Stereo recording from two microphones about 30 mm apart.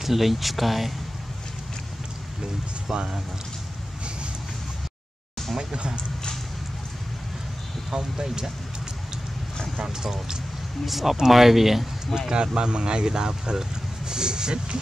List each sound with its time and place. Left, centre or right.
0.0 s speech: centre
2.9 s speech: right
5.6 s speech: right
7.9 s speech: right
10.9 s speech: centre
12.2 s speech: right